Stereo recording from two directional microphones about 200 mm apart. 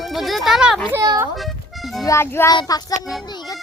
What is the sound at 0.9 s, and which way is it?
Speech, 15° right (ahead or behind).